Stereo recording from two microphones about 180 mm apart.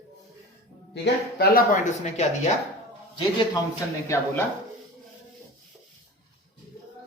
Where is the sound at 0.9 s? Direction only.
65° left (ahead or behind); by 2.3 s 40° left (ahead or behind).